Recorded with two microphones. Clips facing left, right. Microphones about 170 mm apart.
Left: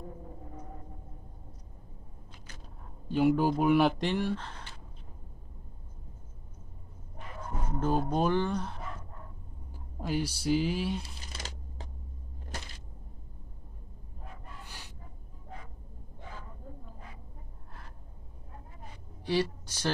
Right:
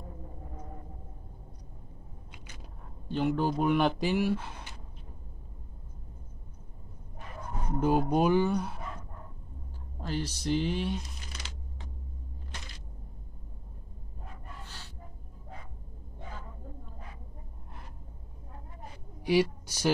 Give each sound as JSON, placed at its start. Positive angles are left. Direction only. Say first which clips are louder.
{"t": 3.1, "sound": "speech", "louder": "left 3 dB", "side_deg": 10}
{"t": 7.8, "sound": "speech", "louder": "right 3 dB", "side_deg": -10}
{"t": 9.9, "sound": "speech", "louder": "left 2 dB", "side_deg": 10}
{"t": 11.3, "sound": "a sound", "louder": "left 2 dB", "side_deg": 45}
{"t": 14.6, "sound": "music", "louder": "right 1 dB", "side_deg": 15}
{"t": 19.2, "sound": "speech", "louder": "right 4 dB", "side_deg": -10}